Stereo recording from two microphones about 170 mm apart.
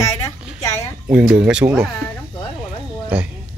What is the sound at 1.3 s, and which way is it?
Speech, 5° right (ahead or behind).